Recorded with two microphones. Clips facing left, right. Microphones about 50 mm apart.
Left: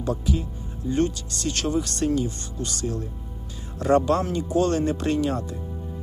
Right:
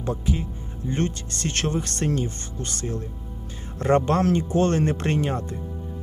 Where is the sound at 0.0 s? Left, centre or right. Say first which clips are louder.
Left 1 dB; right.